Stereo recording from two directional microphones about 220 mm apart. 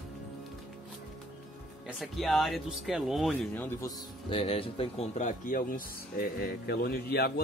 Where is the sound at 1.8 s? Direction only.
Centre (ahead or behind).